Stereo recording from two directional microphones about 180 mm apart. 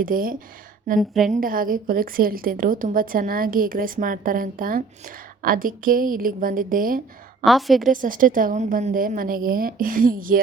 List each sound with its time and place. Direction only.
0.0 s a woman's voice: 50° right (ahead or behind)
0.9 s a woman's voice: centre (ahead or behind)
1.3 s a woman's voice: 50° right (ahead or behind)
7.4 s a woman's voice: centre (ahead or behind)
7.9 s a woman's voice: 50° right (ahead or behind)